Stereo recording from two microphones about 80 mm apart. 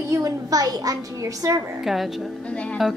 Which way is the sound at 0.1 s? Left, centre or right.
Right.